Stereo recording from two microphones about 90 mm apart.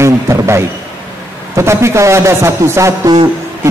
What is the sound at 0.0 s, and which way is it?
A man's voice, 30° right (ahead or behind).